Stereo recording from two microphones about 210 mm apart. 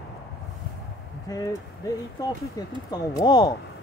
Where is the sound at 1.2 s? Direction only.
15° left (ahead or behind).